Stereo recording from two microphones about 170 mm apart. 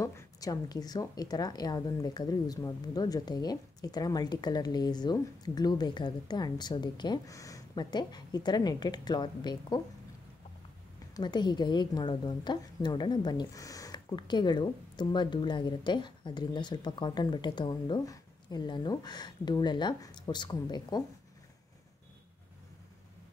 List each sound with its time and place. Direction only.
0.0 s a woman's voice: 20° left (ahead or behind)
11.1 s a woman's voice: 25° left (ahead or behind)